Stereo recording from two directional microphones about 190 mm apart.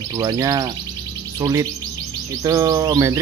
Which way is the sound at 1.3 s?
15° right (ahead or behind).